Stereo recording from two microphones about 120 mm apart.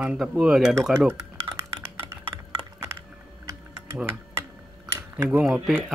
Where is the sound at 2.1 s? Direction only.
20° right (ahead or behind).